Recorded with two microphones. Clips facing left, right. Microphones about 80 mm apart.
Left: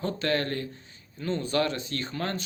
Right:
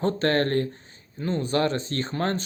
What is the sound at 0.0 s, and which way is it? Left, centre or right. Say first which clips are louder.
A man's voice: right 5 dB; right.